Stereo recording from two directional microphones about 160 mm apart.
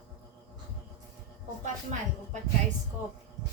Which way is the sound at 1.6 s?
50° right (ahead or behind).